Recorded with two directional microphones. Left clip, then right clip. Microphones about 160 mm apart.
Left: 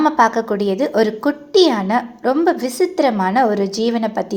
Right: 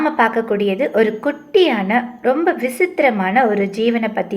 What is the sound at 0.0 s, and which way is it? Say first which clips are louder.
A woman's voice: left 2 dB; 25° left (ahead or behind).